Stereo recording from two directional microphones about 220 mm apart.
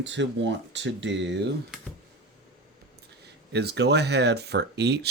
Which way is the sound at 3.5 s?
50° right (ahead or behind).